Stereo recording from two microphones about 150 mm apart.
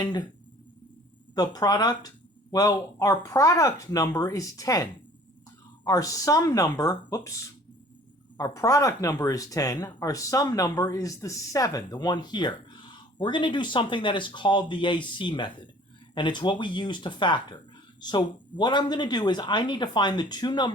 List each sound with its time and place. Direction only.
0.0 s speech: 30° left (ahead or behind)
1.4 s speech: 25° left (ahead or behind)